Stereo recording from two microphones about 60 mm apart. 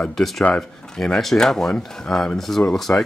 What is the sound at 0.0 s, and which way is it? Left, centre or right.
Speech, centre.